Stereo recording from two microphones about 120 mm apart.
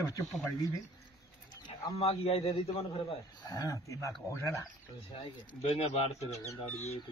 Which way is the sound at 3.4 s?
30° left (ahead or behind).